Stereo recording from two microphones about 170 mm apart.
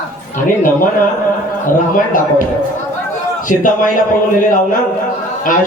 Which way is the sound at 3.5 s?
50° left (ahead or behind).